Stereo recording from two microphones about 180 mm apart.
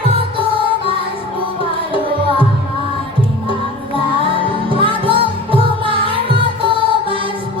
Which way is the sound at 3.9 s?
30° right (ahead or behind).